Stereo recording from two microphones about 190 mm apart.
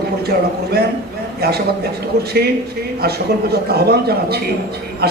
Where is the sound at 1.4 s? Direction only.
55° right (ahead or behind).